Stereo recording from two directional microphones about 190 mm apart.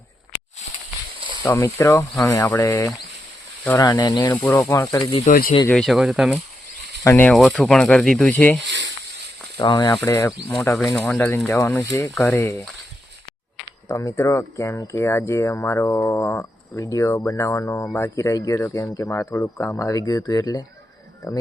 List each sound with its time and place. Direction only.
1.5 s speech: 15° left (ahead or behind)
5.3 s speech: 45° left (ahead or behind)
5.6 s speech: centre (ahead or behind)
7.0 s speech: 10° left (ahead or behind)
9.6 s speech: 25° left (ahead or behind)
13.8 s speech: 15° left (ahead or behind)